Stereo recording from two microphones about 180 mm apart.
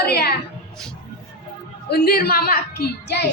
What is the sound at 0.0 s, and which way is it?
Music, 60° left (ahead or behind).